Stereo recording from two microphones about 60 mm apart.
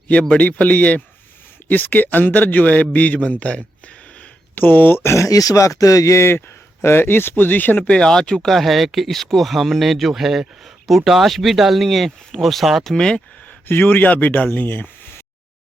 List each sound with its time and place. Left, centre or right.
0.3 s speech: left
4.5 s speech: left
7.9 s speech: centre
13.7 s speech: left